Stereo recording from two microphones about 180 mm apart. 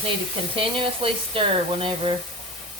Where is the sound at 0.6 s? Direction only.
30° right (ahead or behind).